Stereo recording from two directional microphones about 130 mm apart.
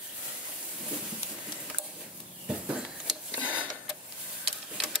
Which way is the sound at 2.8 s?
5° right (ahead or behind).